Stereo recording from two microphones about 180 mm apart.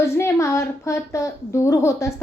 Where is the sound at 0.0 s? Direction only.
15° left (ahead or behind).